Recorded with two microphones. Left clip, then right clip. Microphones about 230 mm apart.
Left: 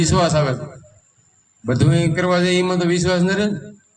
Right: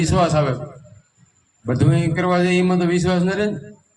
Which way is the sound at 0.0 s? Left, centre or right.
Left.